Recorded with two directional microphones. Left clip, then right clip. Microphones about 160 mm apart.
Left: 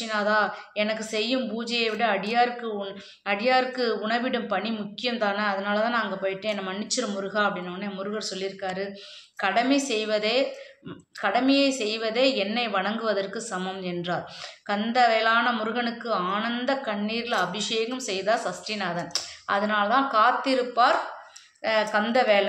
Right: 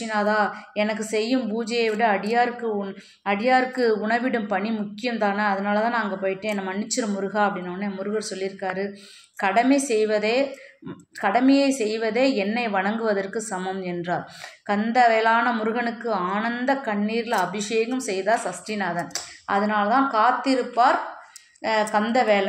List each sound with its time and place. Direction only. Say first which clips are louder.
0.0 s a woman's voice: right 2 dB; 25° right (ahead or behind)